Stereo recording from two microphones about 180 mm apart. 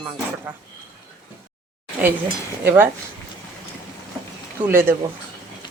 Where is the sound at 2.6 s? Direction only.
10° right (ahead or behind).